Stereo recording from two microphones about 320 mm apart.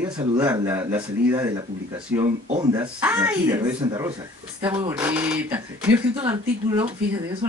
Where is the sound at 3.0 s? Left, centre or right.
Centre.